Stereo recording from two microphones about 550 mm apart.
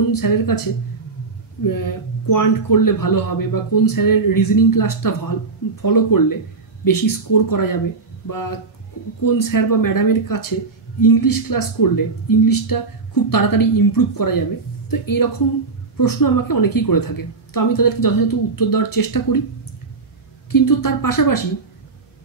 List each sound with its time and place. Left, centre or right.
0.1 s speech: left
1.6 s speech: left
20.5 s speech: left